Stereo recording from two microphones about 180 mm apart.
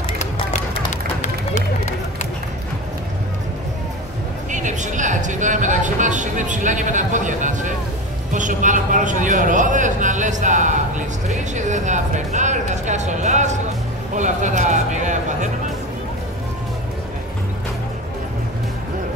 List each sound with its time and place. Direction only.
1.2 s run: 40° left (ahead or behind)
4.5 s a sound: 45° right (ahead or behind)
8.3 s a man's voice: 45° right (ahead or behind)